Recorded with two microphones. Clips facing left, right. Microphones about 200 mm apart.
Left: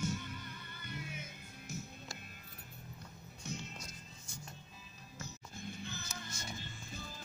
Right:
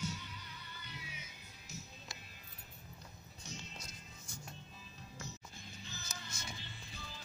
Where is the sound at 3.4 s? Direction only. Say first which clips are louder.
Left 6 dB; 55° left (ahead or behind).